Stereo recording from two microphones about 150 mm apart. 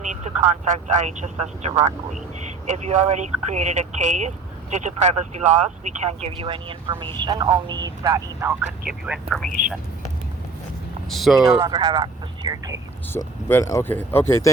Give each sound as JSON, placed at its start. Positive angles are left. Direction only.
{"t": 0.0, "sound": "speech", "side_deg": -50}
{"t": 8.9, "sound": "speech", "side_deg": -5}
{"t": 11.1, "sound": "speech", "side_deg": 0}
{"t": 11.4, "sound": "speech", "side_deg": -25}
{"t": 13.1, "sound": "speech", "side_deg": 20}